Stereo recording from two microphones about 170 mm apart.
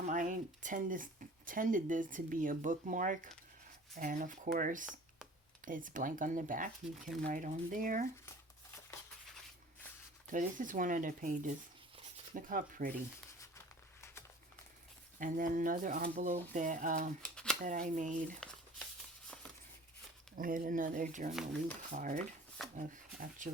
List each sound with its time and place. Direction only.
0.1 s speech: 50° right (ahead or behind)
10.3 s speech: 50° right (ahead or behind)
15.2 s speech: 50° right (ahead or behind)
17.2 s a sound: 5° left (ahead or behind)
17.6 s speech: 50° right (ahead or behind)
20.3 s speech: 55° right (ahead or behind)